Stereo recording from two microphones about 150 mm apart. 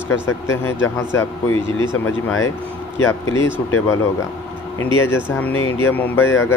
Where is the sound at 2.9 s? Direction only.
20° left (ahead or behind).